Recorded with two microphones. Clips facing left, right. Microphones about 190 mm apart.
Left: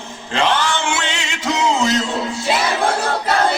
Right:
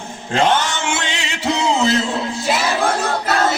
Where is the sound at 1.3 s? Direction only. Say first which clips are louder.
Right 1 dB; 35° right (ahead or behind).